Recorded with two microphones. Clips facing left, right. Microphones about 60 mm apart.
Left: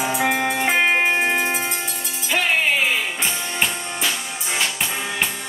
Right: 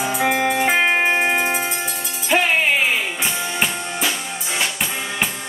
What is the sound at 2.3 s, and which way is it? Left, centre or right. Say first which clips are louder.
Music: right 2 dB; centre.